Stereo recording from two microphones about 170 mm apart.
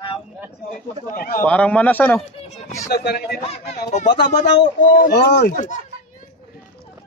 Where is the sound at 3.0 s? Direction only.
70° left (ahead or behind).